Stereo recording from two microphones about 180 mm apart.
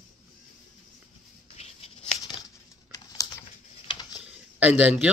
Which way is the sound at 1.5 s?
35° left (ahead or behind).